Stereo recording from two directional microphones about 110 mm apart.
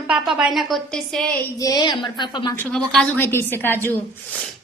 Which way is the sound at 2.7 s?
5° left (ahead or behind).